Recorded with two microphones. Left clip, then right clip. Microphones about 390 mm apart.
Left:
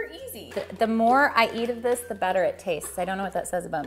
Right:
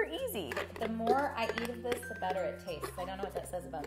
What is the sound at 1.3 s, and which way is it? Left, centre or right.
Speech, left.